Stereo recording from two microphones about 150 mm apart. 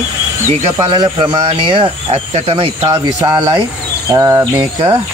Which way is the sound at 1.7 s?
35° right (ahead or behind).